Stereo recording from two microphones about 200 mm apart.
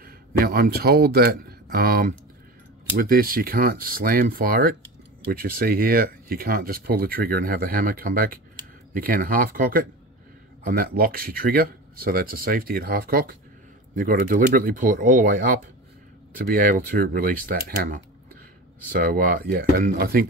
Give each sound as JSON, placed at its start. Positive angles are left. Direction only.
{"t": 0.0, "sound": "speech", "side_deg": -50}